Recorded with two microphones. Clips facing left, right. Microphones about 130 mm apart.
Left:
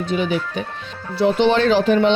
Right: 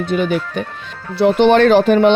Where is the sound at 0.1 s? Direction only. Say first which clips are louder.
Right 3 dB; 55° right (ahead or behind).